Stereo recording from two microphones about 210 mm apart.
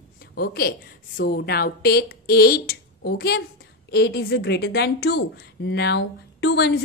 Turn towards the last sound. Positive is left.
turn(degrees=55)  # may be behind; listen again after turning